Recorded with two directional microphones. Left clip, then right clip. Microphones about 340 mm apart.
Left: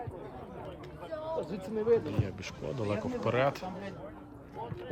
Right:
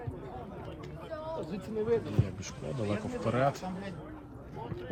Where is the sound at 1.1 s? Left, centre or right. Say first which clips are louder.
Left 3 dB; centre.